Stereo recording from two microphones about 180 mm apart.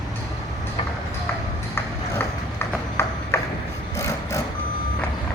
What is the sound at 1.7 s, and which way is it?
Clip-clop, 15° left (ahead or behind).